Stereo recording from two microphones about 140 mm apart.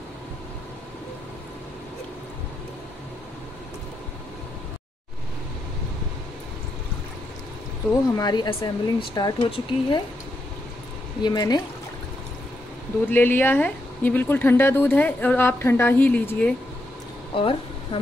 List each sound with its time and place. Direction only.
8.2 s speech: 30° left (ahead or behind)
11.2 s speech: 30° left (ahead or behind)
13.1 s speech: 15° left (ahead or behind)
17.3 s speech: 40° left (ahead or behind)